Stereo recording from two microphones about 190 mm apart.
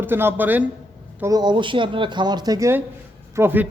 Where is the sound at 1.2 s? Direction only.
20° right (ahead or behind).